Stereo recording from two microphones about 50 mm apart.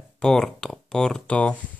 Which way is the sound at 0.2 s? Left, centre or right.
Centre.